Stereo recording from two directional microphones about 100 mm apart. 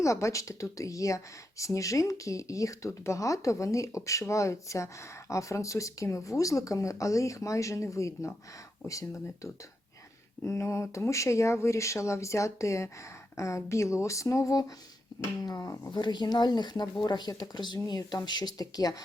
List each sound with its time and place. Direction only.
0.0 s speech: 30° left (ahead or behind)
15.9 s speech: 50° left (ahead or behind)